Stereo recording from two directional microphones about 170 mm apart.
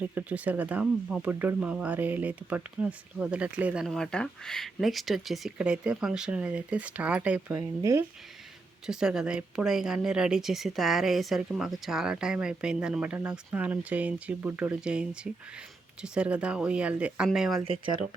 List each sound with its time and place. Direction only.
0.1 s speech: 10° right (ahead or behind)
7.8 s speech: 20° right (ahead or behind)
8.9 s speech: 5° right (ahead or behind)
17.6 s speech: 30° right (ahead or behind)